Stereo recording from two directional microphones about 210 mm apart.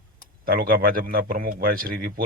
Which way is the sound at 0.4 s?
45° right (ahead or behind).